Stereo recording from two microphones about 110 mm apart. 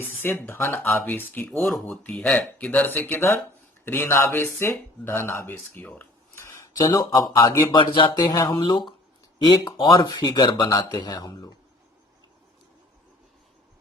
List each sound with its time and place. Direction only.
0.2 s speech: 20° left (ahead or behind)
1.6 s speech: centre (ahead or behind)
2.0 s speech: 10° left (ahead or behind); by 7.8 s 25° left (ahead or behind)
7.8 s speech: 45° left (ahead or behind)
8.1 s speech: 35° left (ahead or behind)